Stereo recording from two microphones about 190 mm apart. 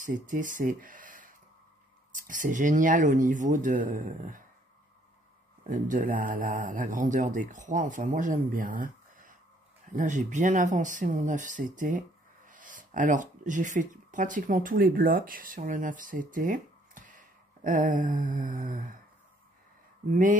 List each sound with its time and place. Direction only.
0.0 s speech: 45° right (ahead or behind)
5.6 s speech: 40° right (ahead or behind)